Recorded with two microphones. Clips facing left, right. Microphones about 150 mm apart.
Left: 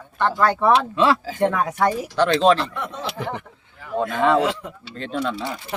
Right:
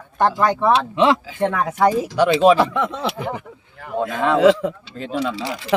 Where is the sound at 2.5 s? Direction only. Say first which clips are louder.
Right 9 dB; 90° right.